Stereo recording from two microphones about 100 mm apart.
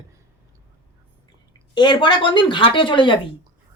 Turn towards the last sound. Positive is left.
turn(degrees=55)  # may be behind; listen again after turning